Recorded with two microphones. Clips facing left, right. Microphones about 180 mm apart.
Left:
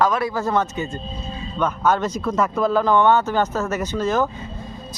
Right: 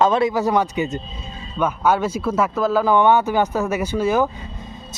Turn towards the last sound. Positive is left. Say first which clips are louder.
# right 2 dB
turn(degrees=-10)  # may be behind; listen again after turning